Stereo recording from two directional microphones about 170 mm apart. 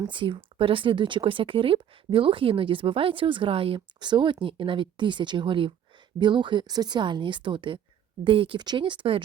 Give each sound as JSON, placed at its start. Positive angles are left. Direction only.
{"t": 0.0, "sound": "speech", "side_deg": -30}